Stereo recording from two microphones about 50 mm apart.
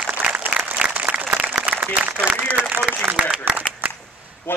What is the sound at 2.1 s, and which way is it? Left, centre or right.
Speech, right.